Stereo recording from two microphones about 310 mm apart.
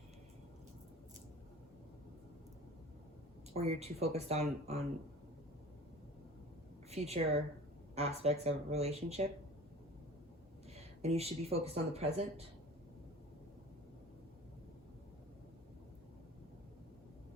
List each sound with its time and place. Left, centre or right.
3.5 s speech: centre
6.9 s speech: centre
11.0 s speech: centre